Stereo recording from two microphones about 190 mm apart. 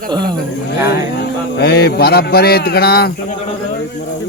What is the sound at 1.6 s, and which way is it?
A man's voice, 60° left (ahead or behind).